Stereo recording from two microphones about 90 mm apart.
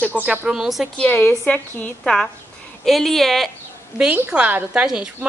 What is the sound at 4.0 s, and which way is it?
Speech, 15° right (ahead or behind).